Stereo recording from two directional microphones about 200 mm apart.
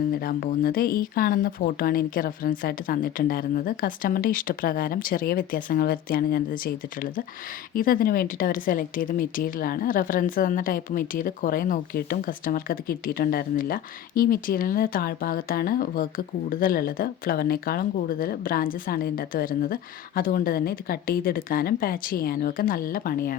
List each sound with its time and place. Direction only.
0.2 s speech: 50° left (ahead or behind)
7.8 s speech: 45° left (ahead or behind)